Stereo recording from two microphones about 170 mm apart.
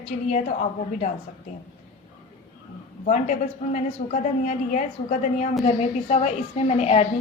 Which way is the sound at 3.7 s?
45° left (ahead or behind).